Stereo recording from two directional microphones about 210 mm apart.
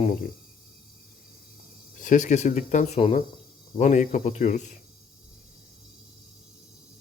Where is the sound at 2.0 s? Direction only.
35° left (ahead or behind).